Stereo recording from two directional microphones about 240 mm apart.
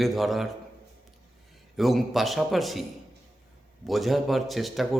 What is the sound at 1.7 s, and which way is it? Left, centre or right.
A man's voice, centre.